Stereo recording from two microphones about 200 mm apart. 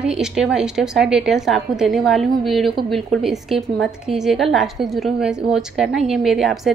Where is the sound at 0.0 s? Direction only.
5° right (ahead or behind).